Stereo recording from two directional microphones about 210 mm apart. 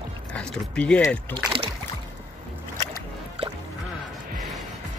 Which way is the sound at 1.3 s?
25° right (ahead or behind).